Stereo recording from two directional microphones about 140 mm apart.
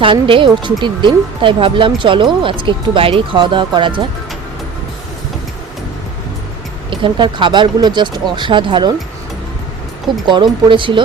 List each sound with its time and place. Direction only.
0.0 s speech: 40° right (ahead or behind)
6.9 s speech: 35° right (ahead or behind)
10.2 s speech: 35° right (ahead or behind)